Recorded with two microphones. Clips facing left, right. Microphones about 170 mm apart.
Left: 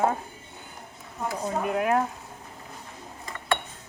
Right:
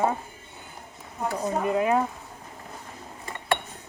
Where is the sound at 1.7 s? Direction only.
5° left (ahead or behind).